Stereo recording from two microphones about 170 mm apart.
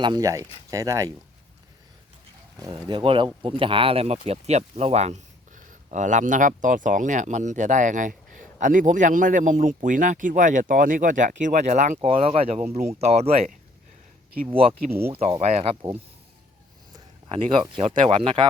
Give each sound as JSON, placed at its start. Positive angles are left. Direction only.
{"t": 0.0, "sound": "speech", "side_deg": -25}
{"t": 2.6, "sound": "a man's voice", "side_deg": -25}
{"t": 12.0, "sound": "speech", "side_deg": -35}
{"t": 14.7, "sound": "speech", "side_deg": -15}
{"t": 15.1, "sound": "speech", "side_deg": -35}
{"t": 16.9, "sound": "speech", "side_deg": -30}